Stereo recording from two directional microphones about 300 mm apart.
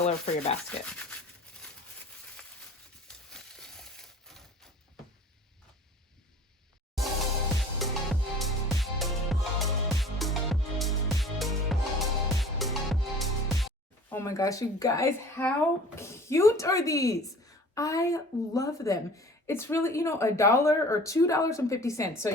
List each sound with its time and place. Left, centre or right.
0.0 s rub: left
0.7 s speech: centre
3.1 s a sound: centre
7.8 s music: centre
14.1 s a woman's voice: centre